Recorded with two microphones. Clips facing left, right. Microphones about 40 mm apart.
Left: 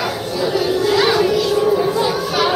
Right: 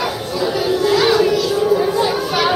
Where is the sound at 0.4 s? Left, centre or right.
Centre.